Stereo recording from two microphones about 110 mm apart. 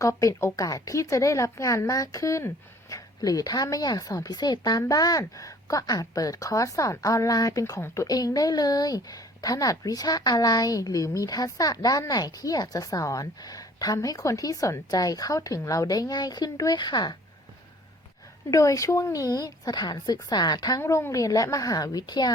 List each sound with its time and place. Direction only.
0.0 s a woman's voice: 30° left (ahead or behind)
18.5 s a woman's voice: 30° left (ahead or behind)